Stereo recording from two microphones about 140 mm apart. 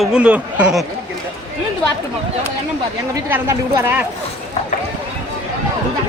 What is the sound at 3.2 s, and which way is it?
Speech, 15° right (ahead or behind).